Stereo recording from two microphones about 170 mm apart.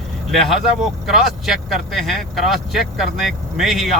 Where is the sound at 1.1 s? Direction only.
Centre (ahead or behind).